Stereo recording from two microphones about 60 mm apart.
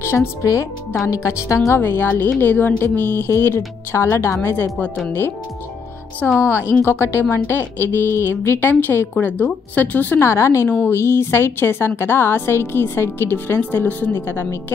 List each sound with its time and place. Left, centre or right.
0.0 s speech: left
0.4 s a woman's voice: left
1.7 s a woman's voice: left
6.4 s a woman's voice: left
9.1 s speech: left
10.2 s a woman's voice: left